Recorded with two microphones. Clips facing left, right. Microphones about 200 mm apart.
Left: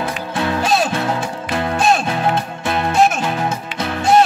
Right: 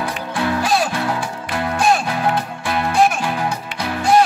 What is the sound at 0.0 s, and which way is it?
Music, 25° left (ahead or behind).